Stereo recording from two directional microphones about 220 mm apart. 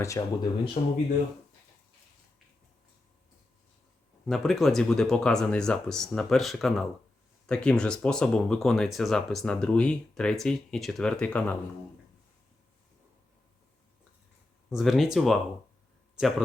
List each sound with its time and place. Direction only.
0.2 s speech: 15° left (ahead or behind)
0.8 s speech: 30° left (ahead or behind)
4.3 s speech: centre (ahead or behind)
14.7 s speech: centre (ahead or behind)